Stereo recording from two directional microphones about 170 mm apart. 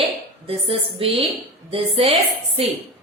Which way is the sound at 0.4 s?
35° right (ahead or behind).